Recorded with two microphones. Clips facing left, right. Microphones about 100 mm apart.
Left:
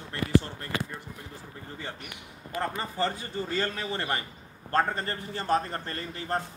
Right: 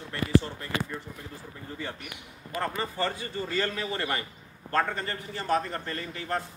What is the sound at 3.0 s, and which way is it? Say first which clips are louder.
A man's voice: left 3 dB; 25° left (ahead or behind).